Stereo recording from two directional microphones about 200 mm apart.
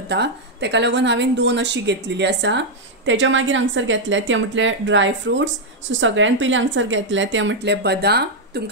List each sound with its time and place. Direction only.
0.1 s a woman's voice: 60° right (ahead or behind)